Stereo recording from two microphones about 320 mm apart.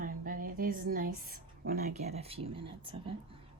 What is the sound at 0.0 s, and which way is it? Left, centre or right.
A woman's voice, right.